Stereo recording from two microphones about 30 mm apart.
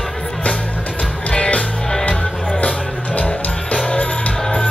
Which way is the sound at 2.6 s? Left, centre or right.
Left.